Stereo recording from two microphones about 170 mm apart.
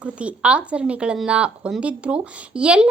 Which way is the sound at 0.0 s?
5° right (ahead or behind).